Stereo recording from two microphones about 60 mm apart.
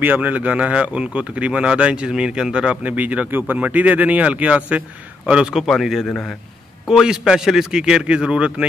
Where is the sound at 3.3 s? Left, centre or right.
Right.